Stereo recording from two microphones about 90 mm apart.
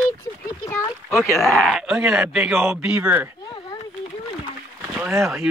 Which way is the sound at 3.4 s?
50° left (ahead or behind).